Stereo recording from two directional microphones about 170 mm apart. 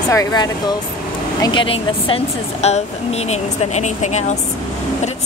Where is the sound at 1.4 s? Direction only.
30° left (ahead or behind).